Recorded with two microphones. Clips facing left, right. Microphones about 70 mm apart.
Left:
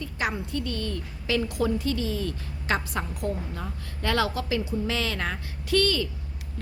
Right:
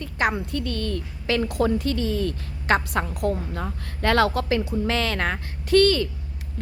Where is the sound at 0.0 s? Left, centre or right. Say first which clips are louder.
Right 5 dB; right.